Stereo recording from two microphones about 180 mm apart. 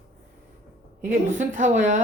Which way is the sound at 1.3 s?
45° right (ahead or behind).